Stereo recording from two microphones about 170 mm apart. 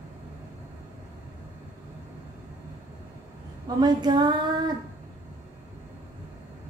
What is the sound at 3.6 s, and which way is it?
Female singing, 25° right (ahead or behind).